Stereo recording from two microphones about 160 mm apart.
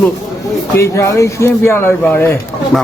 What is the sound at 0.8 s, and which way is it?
Speech, 20° left (ahead or behind).